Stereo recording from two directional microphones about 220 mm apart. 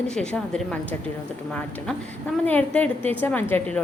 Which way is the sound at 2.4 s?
5° left (ahead or behind).